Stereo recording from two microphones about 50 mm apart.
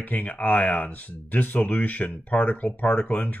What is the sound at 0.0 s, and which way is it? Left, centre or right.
Speech, left.